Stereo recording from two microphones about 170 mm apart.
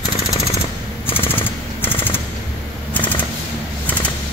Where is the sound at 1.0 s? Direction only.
15° left (ahead or behind).